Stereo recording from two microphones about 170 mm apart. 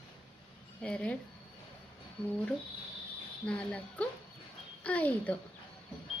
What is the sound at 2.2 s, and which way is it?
Speech, 5° left (ahead or behind).